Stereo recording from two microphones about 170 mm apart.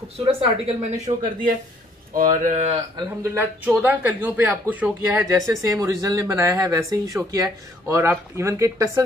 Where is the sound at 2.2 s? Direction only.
50° right (ahead or behind).